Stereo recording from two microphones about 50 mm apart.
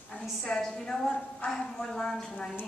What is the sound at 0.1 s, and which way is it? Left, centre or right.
A woman's voice, centre.